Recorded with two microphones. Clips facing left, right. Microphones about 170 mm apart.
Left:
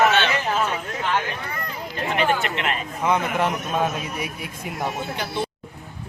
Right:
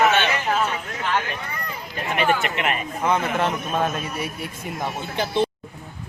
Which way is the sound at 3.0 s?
15° left (ahead or behind).